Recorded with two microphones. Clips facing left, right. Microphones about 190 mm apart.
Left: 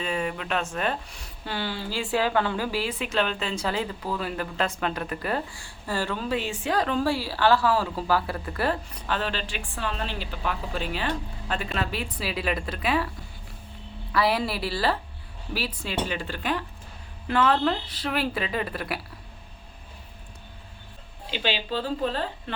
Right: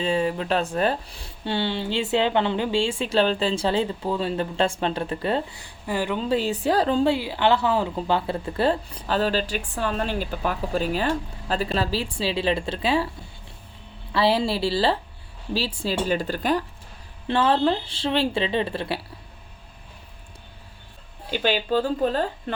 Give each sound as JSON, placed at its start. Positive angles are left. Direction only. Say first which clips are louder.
{"t": 0.0, "sound": "speech", "louder": "right 6 dB", "side_deg": -30}
{"t": 6.2, "sound": "speech", "louder": "right 5 dB", "side_deg": -35}
{"t": 14.1, "sound": "speech", "louder": "right 3 dB", "side_deg": -25}
{"t": 17.2, "sound": "speech", "louder": "right 2 dB", "side_deg": -30}
{"t": 21.2, "sound": "speech", "louder": "right 5 dB", "side_deg": -50}